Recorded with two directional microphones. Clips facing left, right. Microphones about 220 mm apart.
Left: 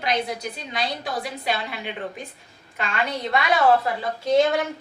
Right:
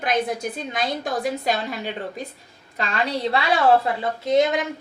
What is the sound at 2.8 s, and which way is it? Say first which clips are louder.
Speech: right 3 dB; 35° right (ahead or behind).